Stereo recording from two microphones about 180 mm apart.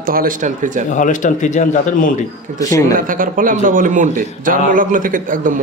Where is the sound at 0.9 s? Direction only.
45° left (ahead or behind).